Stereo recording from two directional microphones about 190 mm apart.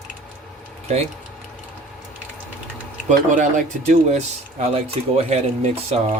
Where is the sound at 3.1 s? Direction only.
40° right (ahead or behind).